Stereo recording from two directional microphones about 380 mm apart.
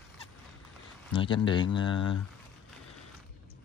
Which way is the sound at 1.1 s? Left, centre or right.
Centre.